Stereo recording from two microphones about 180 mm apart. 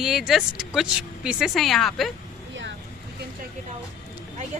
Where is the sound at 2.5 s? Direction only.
90° right.